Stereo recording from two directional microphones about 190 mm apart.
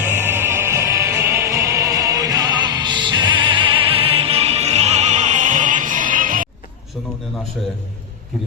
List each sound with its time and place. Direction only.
0.0 s music: 10° right (ahead or behind); by 6.5 s 45° right (ahead or behind)